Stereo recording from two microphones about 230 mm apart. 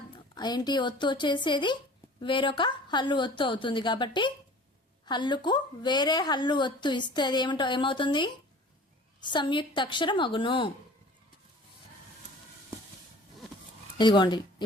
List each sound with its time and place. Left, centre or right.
0.3 s a woman's voice: centre
14.0 s a woman's voice: centre